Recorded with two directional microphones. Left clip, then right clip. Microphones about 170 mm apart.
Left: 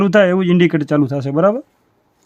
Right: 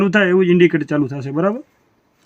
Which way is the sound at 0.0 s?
55° left (ahead or behind).